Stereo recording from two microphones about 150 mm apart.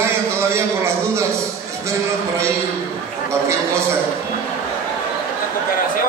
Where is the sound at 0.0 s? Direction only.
15° right (ahead or behind).